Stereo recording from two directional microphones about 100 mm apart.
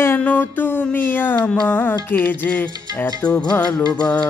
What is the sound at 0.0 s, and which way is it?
Music, 20° left (ahead or behind).